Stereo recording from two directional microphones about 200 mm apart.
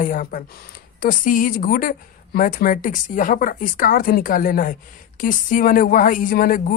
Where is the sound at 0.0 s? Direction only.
40° left (ahead or behind).